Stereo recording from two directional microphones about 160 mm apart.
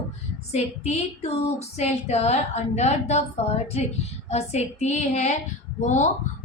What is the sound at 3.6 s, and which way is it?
Speech, 40° left (ahead or behind).